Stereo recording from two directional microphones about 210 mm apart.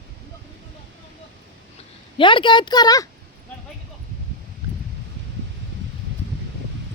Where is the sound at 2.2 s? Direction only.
25° left (ahead or behind).